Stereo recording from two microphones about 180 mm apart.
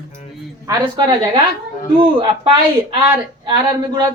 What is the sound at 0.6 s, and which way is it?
Speech, 20° right (ahead or behind).